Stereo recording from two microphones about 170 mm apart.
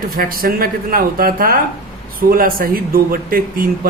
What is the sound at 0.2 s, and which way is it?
Speech, 60° right (ahead or behind).